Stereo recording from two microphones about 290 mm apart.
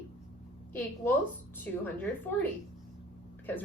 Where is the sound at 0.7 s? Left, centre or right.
Centre.